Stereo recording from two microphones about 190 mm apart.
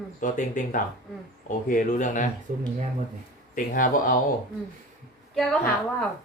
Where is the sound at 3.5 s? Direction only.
45° left (ahead or behind).